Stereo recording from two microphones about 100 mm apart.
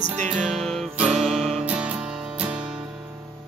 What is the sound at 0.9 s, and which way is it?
Music, 10° right (ahead or behind).